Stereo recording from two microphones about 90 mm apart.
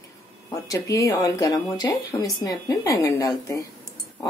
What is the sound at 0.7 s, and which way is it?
Speech, 35° left (ahead or behind).